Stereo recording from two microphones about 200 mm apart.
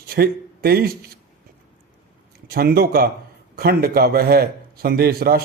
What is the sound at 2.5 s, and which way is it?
Speech, 50° right (ahead or behind).